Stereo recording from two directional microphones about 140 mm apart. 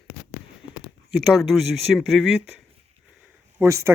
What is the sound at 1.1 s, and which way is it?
Speech, centre (ahead or behind).